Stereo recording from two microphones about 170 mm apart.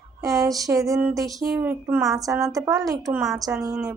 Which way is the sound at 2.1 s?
20° right (ahead or behind).